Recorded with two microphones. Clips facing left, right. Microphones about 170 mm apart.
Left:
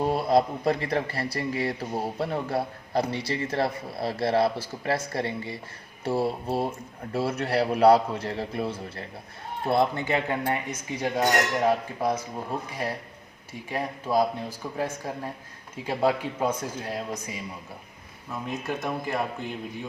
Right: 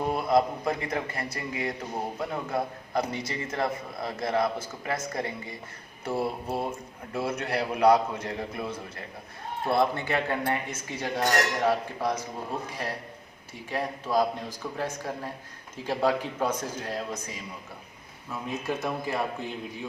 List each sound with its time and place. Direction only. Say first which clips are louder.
0.0 s speech: left 2 dB; 30° left (ahead or behind)
6.1 s mantra: left 3 dB; 30° left (ahead or behind)
7.1 s speech: left 3 dB; 30° left (ahead or behind); by 12.1 s 15° left (ahead or behind)
13.5 s speech: even; 10° left (ahead or behind)
18.3 s speech: even; centre (ahead or behind)